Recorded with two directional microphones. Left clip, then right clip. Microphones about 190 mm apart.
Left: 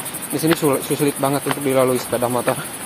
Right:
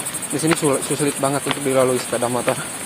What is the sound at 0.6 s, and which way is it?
Speech, 15° left (ahead or behind).